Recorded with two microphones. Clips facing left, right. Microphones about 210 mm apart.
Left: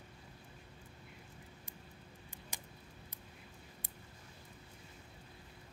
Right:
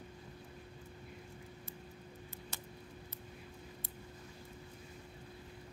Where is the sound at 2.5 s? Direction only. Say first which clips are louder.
Even; 15° left (ahead or behind).